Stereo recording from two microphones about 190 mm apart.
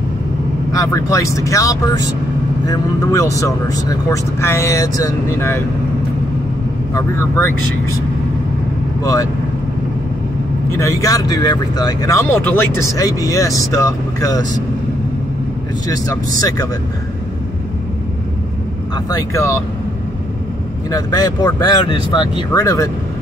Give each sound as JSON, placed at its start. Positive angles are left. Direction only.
{"t": 0.7, "sound": "speech", "side_deg": 15}
{"t": 6.9, "sound": "speech", "side_deg": 15}
{"t": 9.0, "sound": "speech", "side_deg": 20}
{"t": 10.7, "sound": "speech", "side_deg": 15}
{"t": 16.1, "sound": "speech", "side_deg": 20}
{"t": 19.0, "sound": "speech", "side_deg": 15}
{"t": 20.9, "sound": "speech", "side_deg": 20}